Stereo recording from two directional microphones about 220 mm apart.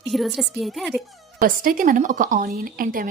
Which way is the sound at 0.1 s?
Centre (ahead or behind).